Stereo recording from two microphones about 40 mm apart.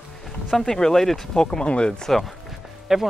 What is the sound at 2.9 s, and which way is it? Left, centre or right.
Speech, centre.